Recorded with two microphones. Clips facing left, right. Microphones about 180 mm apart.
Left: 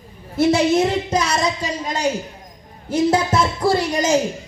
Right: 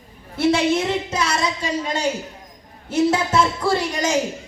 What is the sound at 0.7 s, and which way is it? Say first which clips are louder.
Speech: left 4 dB; 40° left (ahead or behind).